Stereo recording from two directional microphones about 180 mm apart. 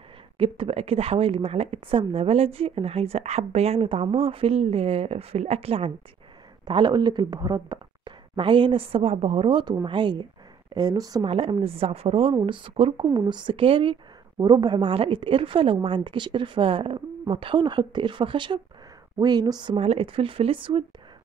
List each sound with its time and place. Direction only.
0.4 s a woman's voice: 30° right (ahead or behind)